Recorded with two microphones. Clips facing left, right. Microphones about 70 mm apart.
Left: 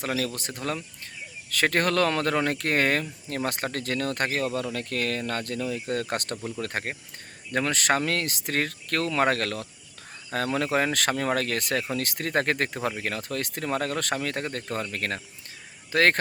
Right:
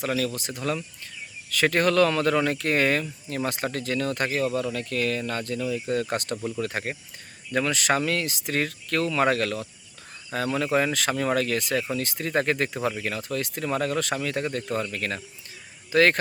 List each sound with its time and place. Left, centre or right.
0.6 s speech: left